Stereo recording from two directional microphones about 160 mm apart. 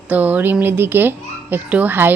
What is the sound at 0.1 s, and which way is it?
A child's voice, 10° right (ahead or behind).